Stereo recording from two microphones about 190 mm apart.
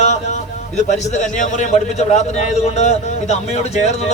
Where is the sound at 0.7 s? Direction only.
40° left (ahead or behind).